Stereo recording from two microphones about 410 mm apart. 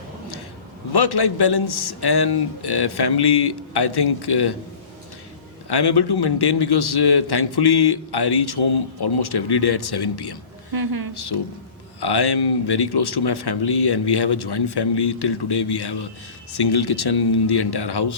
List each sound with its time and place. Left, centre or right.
0.9 s speech: left
5.6 s speech: left
10.7 s a woman's voice: right
11.1 s speech: left